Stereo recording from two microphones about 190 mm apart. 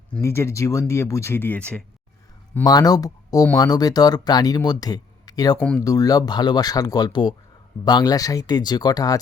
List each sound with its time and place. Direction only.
0.1 s speech: 15° left (ahead or behind)
2.6 s speech: 20° left (ahead or behind)
5.5 s speech: 5° left (ahead or behind)
5.8 s speech: 20° left (ahead or behind)